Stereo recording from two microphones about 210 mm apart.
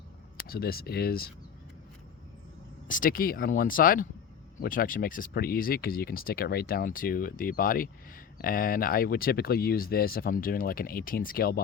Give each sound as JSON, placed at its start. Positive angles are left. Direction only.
{"t": 0.3, "sound": "speech", "side_deg": 45}
{"t": 2.8, "sound": "speech", "side_deg": 40}